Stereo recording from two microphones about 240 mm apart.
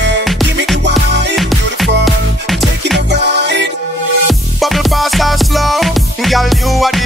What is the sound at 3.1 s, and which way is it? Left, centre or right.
Music, right.